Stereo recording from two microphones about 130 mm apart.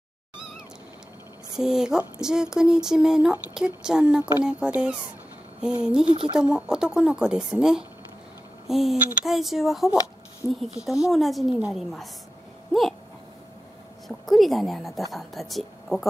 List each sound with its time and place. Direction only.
1.6 s speech: 5° right (ahead or behind)
6.0 s speech: 40° right (ahead or behind)
6.3 s speech: 5° right (ahead or behind)
14.0 s speech: centre (ahead or behind)